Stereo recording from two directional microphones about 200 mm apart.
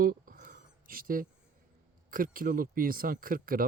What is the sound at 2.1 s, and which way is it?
Speech, 45° right (ahead or behind).